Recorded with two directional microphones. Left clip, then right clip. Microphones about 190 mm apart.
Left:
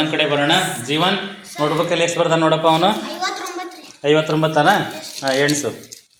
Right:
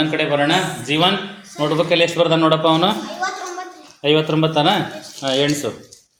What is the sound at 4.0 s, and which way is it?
A man's voice, 25° right (ahead or behind).